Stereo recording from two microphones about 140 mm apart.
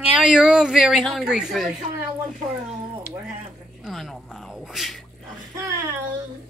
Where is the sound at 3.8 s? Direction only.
Centre (ahead or behind).